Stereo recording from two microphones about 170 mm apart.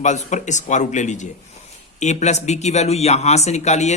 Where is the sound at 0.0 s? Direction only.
45° left (ahead or behind).